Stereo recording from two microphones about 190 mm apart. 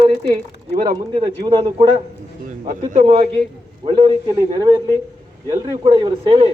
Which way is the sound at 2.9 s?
30° right (ahead or behind).